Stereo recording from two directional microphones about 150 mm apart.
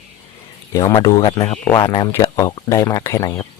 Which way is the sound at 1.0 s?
25° left (ahead or behind).